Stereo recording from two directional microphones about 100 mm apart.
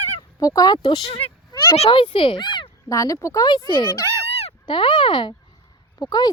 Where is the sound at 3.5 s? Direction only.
50° left (ahead or behind).